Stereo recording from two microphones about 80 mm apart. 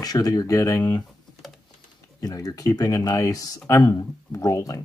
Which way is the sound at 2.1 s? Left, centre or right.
Left.